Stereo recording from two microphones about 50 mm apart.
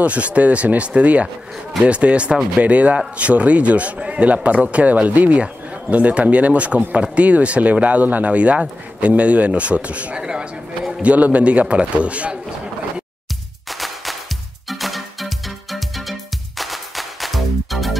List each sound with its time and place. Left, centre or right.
0.0 s speech: right
13.7 s music: centre